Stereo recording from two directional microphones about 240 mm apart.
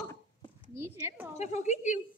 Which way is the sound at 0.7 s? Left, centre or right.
Centre.